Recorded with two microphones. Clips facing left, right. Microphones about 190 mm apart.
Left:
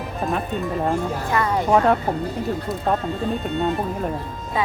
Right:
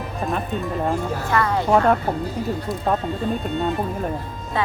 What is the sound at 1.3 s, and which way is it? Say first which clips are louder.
Speech: right 1 dB; 20° left (ahead or behind).